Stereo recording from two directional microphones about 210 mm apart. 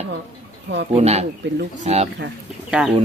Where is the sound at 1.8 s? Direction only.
30° right (ahead or behind).